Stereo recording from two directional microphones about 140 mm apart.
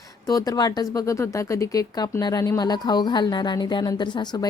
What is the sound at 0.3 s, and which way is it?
Speech, 25° left (ahead or behind).